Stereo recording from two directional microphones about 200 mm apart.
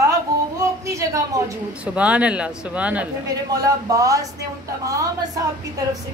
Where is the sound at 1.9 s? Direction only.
5° right (ahead or behind).